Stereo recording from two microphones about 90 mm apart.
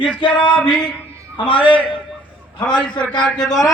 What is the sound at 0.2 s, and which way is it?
Male singing, 65° left (ahead or behind).